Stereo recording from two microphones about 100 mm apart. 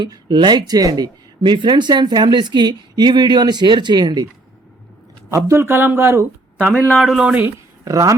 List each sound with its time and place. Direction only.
0.0 s speech: 50° right (ahead or behind)
5.3 s speech: 25° right (ahead or behind)
7.0 s speech: 5° right (ahead or behind)
7.9 s speech: 35° right (ahead or behind)